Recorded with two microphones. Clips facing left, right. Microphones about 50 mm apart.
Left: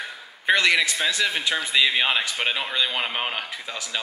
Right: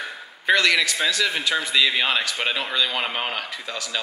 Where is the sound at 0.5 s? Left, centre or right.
Centre.